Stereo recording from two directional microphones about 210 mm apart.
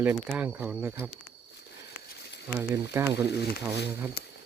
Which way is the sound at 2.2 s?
55° left (ahead or behind).